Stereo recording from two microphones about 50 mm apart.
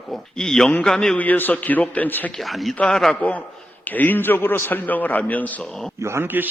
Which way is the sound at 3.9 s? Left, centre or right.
Left.